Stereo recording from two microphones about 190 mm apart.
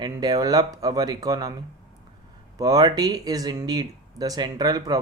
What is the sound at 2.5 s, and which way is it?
Speech, 20° right (ahead or behind).